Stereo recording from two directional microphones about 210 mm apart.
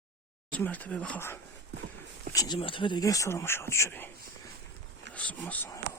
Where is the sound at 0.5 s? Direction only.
5° left (ahead or behind).